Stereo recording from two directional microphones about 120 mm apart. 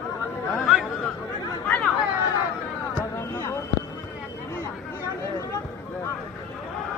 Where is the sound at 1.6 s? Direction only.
10° left (ahead or behind).